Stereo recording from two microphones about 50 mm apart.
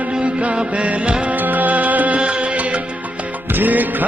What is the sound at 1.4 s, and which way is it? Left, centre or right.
Music, right.